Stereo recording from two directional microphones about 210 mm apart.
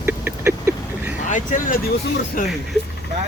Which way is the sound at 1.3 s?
40° left (ahead or behind).